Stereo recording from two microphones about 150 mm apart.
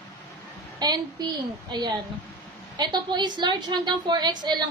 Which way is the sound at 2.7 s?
30° right (ahead or behind).